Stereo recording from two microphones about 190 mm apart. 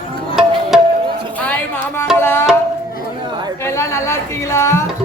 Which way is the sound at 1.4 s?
10° left (ahead or behind).